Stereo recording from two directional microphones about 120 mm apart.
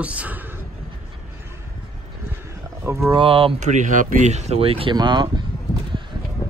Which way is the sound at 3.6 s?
90° right.